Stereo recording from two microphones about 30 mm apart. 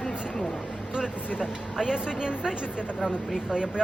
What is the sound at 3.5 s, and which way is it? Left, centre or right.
Speech, right.